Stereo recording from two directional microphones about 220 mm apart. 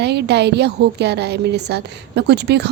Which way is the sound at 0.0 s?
50° right (ahead or behind).